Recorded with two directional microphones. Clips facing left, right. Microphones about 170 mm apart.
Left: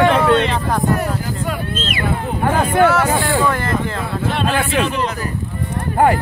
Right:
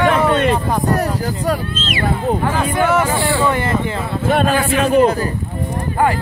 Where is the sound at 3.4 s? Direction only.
5° right (ahead or behind).